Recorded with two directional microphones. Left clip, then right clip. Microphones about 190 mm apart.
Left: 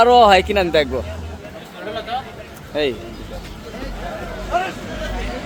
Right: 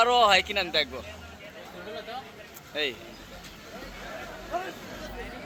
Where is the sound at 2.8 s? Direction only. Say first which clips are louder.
Left 10 dB; 25° left (ahead or behind).